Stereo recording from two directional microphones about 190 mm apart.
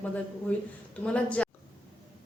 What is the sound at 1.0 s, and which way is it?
Speech, 5° left (ahead or behind).